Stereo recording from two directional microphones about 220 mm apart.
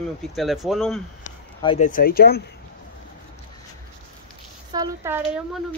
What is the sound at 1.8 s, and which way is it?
Speech, 40° left (ahead or behind).